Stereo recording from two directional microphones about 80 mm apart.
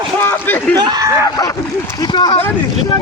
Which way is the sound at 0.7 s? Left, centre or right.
Right.